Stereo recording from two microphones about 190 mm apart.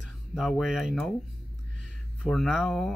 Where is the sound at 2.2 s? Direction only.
Centre (ahead or behind).